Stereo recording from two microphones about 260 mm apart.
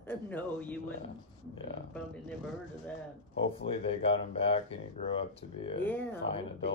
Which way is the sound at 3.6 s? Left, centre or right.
Left.